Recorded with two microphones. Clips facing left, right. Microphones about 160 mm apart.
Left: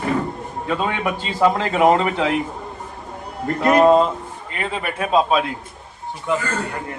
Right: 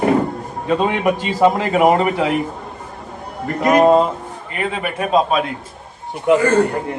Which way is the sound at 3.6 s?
10° right (ahead or behind).